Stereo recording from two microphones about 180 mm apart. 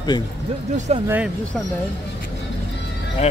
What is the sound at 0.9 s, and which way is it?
Speech, 35° right (ahead or behind).